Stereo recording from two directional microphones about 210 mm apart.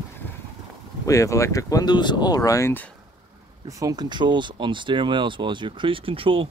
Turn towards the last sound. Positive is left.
turn(degrees=-25)  # may be behind; listen again after turning